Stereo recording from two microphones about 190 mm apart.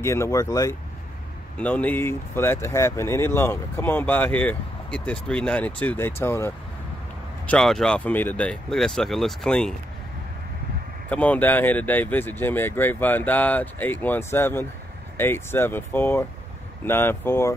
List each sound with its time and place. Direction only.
0.0 s speech: 15° left (ahead or behind)
7.4 s speech: 5° left (ahead or behind)
11.1 s speech: 10° left (ahead or behind)